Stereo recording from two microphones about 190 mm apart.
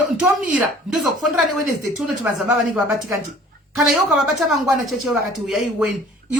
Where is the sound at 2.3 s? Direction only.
10° right (ahead or behind).